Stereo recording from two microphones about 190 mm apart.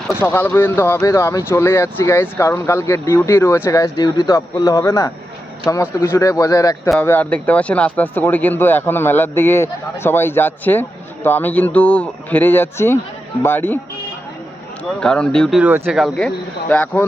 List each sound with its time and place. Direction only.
0.2 s speech: 10° left (ahead or behind)
15.0 s speech: 5° left (ahead or behind)
16.0 s speech: centre (ahead or behind)